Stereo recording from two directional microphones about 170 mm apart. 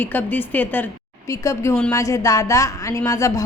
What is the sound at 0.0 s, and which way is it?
Speech, 10° left (ahead or behind).